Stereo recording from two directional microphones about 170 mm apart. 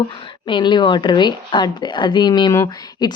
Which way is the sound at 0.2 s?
30° left (ahead or behind).